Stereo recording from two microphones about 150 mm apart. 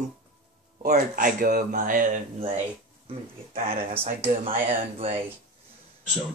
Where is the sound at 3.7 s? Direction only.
40° right (ahead or behind).